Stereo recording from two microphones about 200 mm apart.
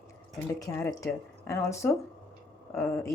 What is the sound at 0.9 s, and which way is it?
A woman's voice, 15° left (ahead or behind).